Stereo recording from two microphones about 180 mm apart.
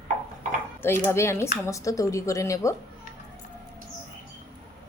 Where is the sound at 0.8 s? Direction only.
15° left (ahead or behind).